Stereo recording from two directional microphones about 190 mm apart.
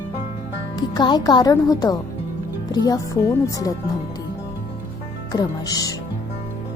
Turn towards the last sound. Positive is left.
turn(degrees=20)  # may be behind; listen again after turning